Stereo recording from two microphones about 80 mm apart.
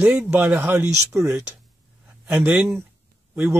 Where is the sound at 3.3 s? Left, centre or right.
Right.